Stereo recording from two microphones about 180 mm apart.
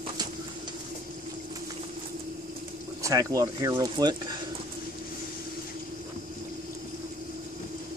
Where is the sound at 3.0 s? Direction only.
20° right (ahead or behind).